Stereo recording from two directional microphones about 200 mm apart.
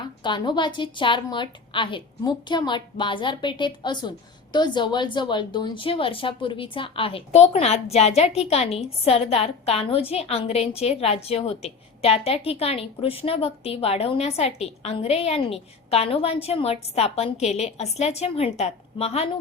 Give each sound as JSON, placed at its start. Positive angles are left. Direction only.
{"t": 0.2, "sound": "a woman's voice", "side_deg": 25}